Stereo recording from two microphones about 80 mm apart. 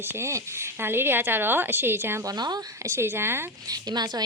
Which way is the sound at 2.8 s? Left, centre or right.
Right.